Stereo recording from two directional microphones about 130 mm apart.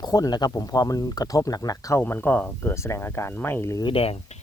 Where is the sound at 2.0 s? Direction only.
15° left (ahead or behind).